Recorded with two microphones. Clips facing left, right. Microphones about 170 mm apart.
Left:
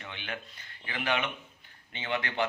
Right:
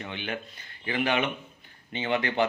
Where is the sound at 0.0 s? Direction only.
20° right (ahead or behind).